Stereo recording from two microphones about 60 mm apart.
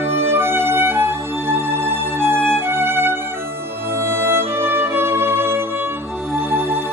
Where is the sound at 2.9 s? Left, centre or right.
Right.